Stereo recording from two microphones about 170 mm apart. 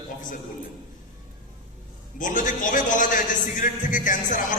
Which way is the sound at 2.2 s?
50° left (ahead or behind).